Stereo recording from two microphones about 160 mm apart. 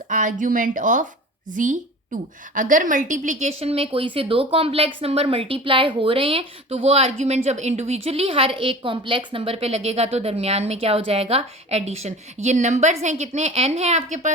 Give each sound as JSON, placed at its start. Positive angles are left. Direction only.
{"t": 0.1, "sound": "a woman's voice", "side_deg": -55}